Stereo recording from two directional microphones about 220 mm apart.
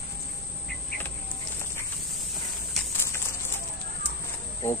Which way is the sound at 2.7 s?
10° left (ahead or behind).